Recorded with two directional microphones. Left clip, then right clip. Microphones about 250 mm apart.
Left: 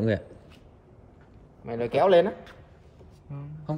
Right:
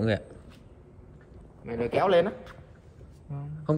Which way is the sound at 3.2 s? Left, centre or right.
Centre.